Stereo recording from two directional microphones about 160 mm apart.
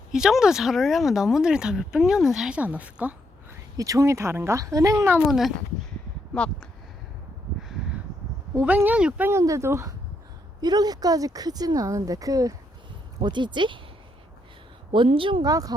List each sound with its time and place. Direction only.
0.1 s speech: 5° right (ahead or behind)
3.8 s speech: 20° right (ahead or behind)
5.3 s speech: centre (ahead or behind)
8.5 s speech: 10° right (ahead or behind); by 13.7 s 30° right (ahead or behind)
14.9 s speech: 30° right (ahead or behind)